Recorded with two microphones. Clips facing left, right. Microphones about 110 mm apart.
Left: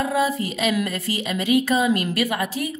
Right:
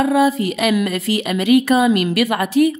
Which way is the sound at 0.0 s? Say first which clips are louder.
Right 7 dB; 70° right (ahead or behind).